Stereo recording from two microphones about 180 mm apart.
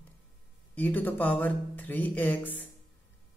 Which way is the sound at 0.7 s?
10° left (ahead or behind).